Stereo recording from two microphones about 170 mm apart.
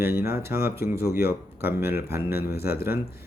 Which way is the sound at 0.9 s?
65° left (ahead or behind).